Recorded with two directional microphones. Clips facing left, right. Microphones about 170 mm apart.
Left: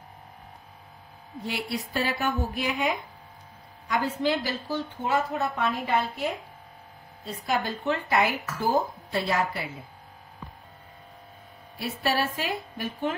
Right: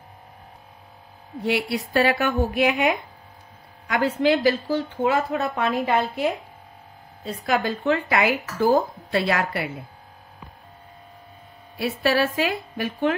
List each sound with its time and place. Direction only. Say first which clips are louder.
1.4 s a woman's voice: right 8 dB; 70° right (ahead or behind); by 6.2 s 90° right
7.2 s a woman's voice: right 5 dB; 90° right; by 9.7 s 70° right (ahead or behind)
11.8 s a woman's voice: right 6 dB; 90° right